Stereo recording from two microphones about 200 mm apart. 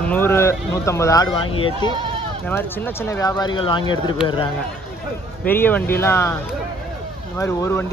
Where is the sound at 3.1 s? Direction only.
15° left (ahead or behind).